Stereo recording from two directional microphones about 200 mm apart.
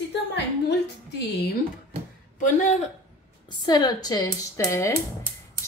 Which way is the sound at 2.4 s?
35° left (ahead or behind).